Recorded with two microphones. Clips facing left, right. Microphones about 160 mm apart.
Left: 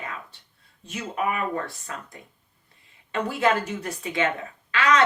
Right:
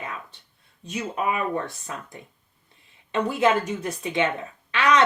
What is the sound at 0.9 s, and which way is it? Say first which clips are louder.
Speech: right 1 dB; 20° right (ahead or behind).